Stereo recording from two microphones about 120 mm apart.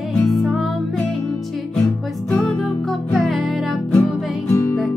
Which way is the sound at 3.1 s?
Centre (ahead or behind).